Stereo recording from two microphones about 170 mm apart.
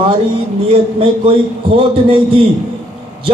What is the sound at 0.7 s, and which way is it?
Speech, 35° right (ahead or behind).